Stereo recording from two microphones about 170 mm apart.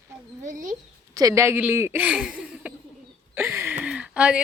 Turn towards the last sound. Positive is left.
turn(degrees=-5)  # may be behind; listen again after turning